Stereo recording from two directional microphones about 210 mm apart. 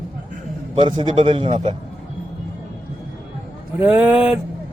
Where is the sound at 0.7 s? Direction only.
25° right (ahead or behind).